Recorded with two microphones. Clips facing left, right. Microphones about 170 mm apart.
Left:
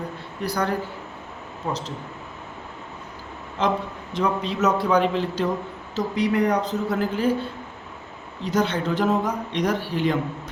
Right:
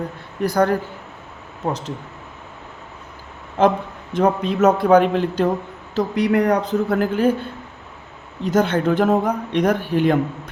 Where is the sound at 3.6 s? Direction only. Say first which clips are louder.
Right 7 dB; 55° right (ahead or behind).